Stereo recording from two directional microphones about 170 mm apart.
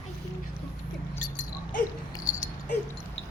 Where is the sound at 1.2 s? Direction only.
50° left (ahead or behind).